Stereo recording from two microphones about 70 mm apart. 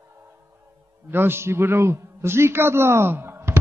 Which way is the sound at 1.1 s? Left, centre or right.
Right.